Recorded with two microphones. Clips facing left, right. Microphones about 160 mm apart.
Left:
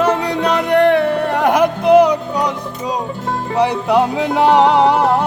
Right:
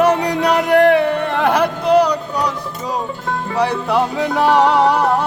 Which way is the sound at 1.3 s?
15° left (ahead or behind).